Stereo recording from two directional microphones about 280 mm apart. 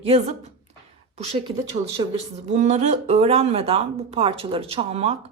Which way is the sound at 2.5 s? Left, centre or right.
Right.